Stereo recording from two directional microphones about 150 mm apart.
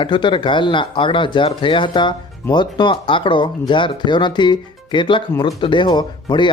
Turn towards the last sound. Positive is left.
turn(degrees=30)  # may be behind; listen again after turning